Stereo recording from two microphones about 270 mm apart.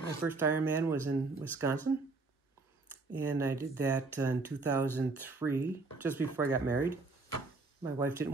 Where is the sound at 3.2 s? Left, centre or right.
Centre.